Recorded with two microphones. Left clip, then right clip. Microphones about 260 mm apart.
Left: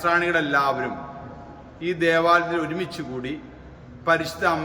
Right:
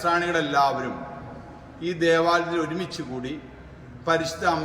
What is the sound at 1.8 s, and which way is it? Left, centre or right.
A man's voice, centre.